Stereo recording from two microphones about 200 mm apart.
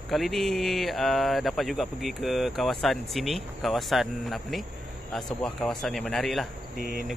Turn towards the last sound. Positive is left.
turn(degrees=-40)  # may be behind; listen again after turning